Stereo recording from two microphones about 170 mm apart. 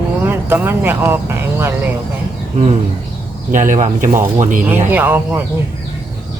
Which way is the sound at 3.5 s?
45° right (ahead or behind).